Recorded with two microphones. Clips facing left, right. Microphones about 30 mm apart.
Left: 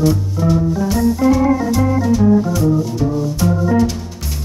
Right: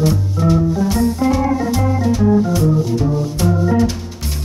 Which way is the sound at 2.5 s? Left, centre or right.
Centre.